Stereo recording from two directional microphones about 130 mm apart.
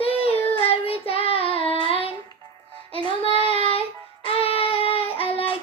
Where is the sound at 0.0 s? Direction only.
50° left (ahead or behind).